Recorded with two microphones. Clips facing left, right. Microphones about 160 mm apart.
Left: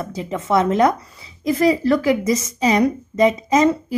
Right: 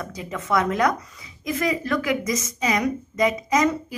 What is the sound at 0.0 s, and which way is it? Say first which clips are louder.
A woman's voice: left 6 dB; 30° left (ahead or behind).